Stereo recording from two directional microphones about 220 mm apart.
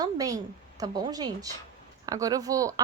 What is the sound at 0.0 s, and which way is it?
A woman's voice, 15° right (ahead or behind).